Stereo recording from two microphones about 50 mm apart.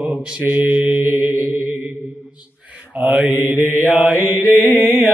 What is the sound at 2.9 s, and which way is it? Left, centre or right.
Mantra, right.